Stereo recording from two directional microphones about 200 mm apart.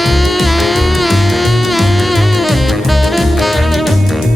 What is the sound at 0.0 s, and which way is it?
Music, centre (ahead or behind).